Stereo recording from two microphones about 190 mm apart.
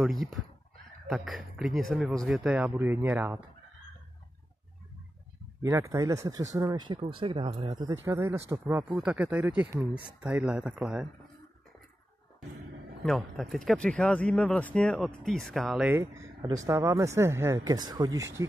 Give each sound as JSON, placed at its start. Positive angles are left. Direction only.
{"t": 1.0, "sound": "speech", "side_deg": 0}
{"t": 5.6, "sound": "speech", "side_deg": -15}
{"t": 10.0, "sound": "speech", "side_deg": -5}
{"t": 13.0, "sound": "speech", "side_deg": 0}
{"t": 15.9, "sound": "speech", "side_deg": -15}